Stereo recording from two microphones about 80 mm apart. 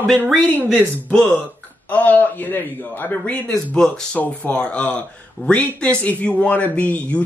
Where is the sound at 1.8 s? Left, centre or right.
Left.